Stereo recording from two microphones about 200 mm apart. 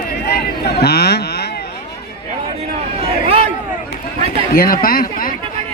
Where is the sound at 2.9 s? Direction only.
30° right (ahead or behind).